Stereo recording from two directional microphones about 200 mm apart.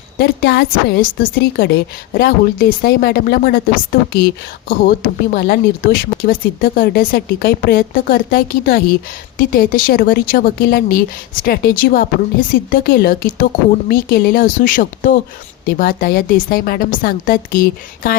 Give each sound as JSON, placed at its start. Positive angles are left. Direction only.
{"t": 0.2, "sound": "speech", "side_deg": 55}
{"t": 4.7, "sound": "speech", "side_deg": 45}